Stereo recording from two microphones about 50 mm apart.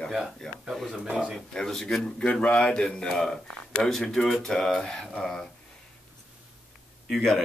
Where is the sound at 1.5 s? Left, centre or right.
Centre.